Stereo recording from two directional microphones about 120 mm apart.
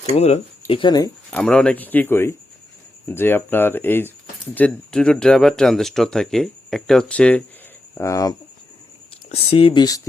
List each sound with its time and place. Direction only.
0.0 s speech: 60° left (ahead or behind)
0.8 s speech: 35° left (ahead or behind)
1.3 s speech: 10° left (ahead or behind)
7.9 s speech: 25° left (ahead or behind)
9.3 s speech: 55° left (ahead or behind)
9.8 s speech: 30° left (ahead or behind)